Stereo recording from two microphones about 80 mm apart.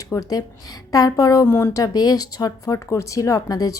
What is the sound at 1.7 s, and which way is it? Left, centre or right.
Speech, left.